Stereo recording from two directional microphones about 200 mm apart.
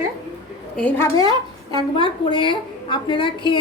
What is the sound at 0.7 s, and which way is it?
Speech, 5° left (ahead or behind).